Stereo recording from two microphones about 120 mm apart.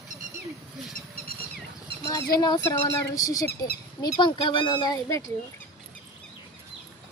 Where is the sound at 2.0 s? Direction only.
30° left (ahead or behind).